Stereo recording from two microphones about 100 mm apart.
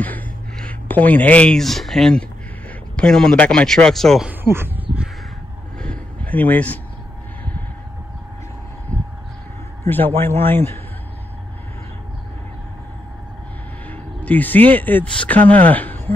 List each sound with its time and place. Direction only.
0.7 s speech: 15° left (ahead or behind)
1.6 s a man's voice: centre (ahead or behind)
4.3 s speech: 20° right (ahead or behind)
5.8 s a sound: 15° left (ahead or behind)
8.9 s vehicle: 15° left (ahead or behind)
9.8 s a man's voice: 20° left (ahead or behind)
13.8 s speech: 15° left (ahead or behind)